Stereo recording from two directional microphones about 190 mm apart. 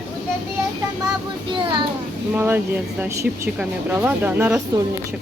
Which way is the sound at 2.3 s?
10° right (ahead or behind).